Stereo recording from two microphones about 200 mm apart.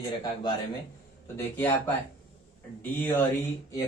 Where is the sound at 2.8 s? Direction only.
10° left (ahead or behind).